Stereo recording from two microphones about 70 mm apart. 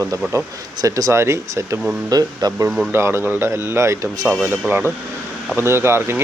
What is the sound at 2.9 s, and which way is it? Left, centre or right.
Speech, right.